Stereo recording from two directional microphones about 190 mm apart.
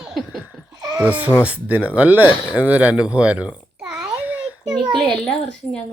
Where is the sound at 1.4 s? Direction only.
10° right (ahead or behind).